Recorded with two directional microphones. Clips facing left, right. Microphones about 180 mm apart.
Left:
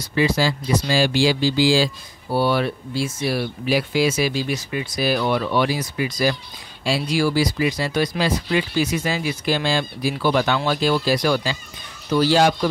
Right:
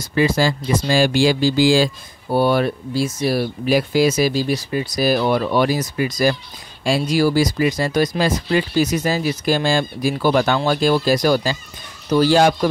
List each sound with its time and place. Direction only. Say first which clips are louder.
0.0 s speech: right 2 dB; 45° right (ahead or behind)